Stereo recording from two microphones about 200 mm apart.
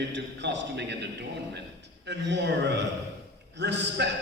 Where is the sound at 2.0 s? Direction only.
60° right (ahead or behind).